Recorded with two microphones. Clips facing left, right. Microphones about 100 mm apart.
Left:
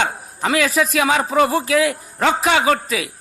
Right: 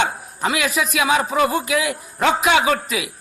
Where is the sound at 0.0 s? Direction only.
35° left (ahead or behind).